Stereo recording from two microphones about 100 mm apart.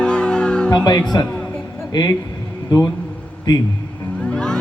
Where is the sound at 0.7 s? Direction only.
40° left (ahead or behind).